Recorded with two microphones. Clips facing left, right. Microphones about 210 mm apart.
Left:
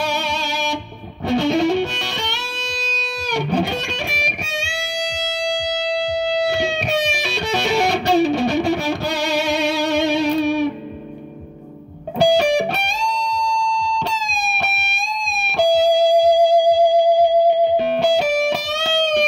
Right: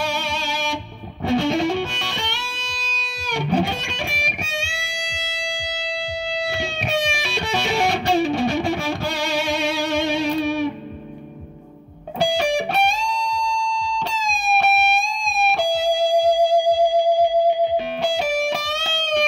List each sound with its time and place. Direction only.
0.0 s music: 40° left (ahead or behind)
6.2 s music: 40° left (ahead or behind)
12.5 s music: 40° left (ahead or behind)
15.7 s music: 40° left (ahead or behind)